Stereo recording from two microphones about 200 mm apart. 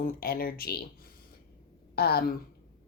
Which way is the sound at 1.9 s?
50° left (ahead or behind).